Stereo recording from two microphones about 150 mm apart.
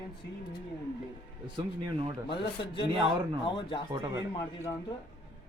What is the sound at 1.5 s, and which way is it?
Speech, 35° right (ahead or behind).